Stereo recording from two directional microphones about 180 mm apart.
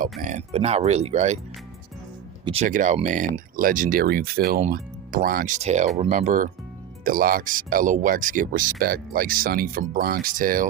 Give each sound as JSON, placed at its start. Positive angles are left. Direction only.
{"t": 0.0, "sound": "speech", "side_deg": -45}
{"t": 2.4, "sound": "speech", "side_deg": -30}
{"t": 2.6, "sound": "speech", "side_deg": -45}